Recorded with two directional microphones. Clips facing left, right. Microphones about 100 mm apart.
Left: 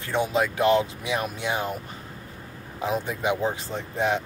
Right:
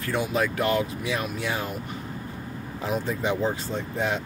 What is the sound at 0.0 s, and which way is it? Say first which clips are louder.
Speech: left 1 dB; 25° left (ahead or behind).